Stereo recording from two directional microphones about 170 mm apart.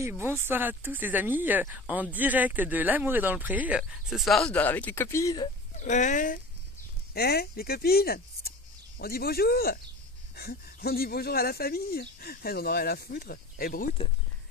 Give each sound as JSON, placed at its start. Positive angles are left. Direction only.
{"t": 0.1, "sound": "speech", "side_deg": -15}
{"t": 5.8, "sound": "speech", "side_deg": 45}
{"t": 7.2, "sound": "speech", "side_deg": 65}